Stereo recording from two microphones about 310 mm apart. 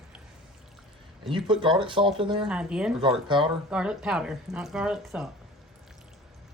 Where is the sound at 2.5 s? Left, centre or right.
Centre.